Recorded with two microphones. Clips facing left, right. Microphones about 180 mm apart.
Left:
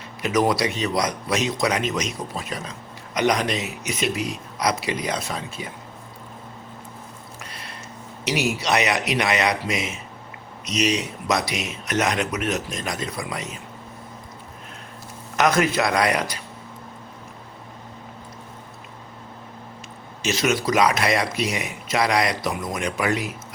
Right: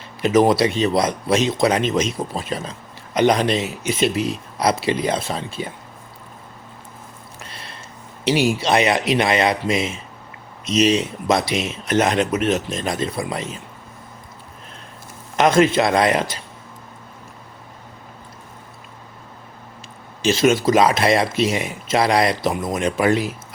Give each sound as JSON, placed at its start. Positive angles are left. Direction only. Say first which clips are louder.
{"t": 0.2, "sound": "speech", "louder": "right 6 dB", "side_deg": -25}
{"t": 8.2, "sound": "speech", "louder": "right 6 dB", "side_deg": -30}
{"t": 15.4, "sound": "speech", "louder": "right 5 dB", "side_deg": -25}
{"t": 20.2, "sound": "speech", "louder": "right 6 dB", "side_deg": -30}